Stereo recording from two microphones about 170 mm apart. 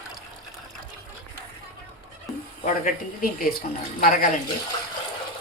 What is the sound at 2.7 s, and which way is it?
Speech, 50° left (ahead or behind).